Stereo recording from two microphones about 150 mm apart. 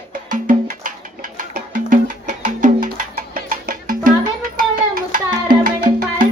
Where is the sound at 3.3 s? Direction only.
70° right (ahead or behind).